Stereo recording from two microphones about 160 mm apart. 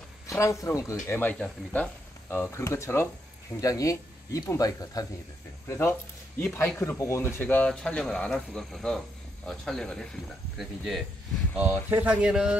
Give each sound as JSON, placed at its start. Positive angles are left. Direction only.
{"t": 0.3, "sound": "speech", "side_deg": 20}